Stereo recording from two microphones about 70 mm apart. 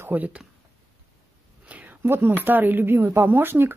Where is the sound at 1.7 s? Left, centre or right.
Right.